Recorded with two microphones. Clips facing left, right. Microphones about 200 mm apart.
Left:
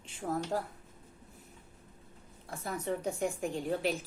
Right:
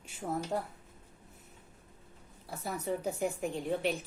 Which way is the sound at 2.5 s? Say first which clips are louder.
Even; 5° right (ahead or behind).